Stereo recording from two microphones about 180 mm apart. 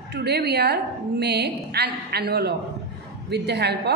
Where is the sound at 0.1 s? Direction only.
65° right (ahead or behind).